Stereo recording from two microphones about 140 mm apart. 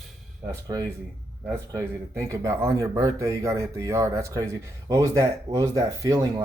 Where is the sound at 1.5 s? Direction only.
20° right (ahead or behind).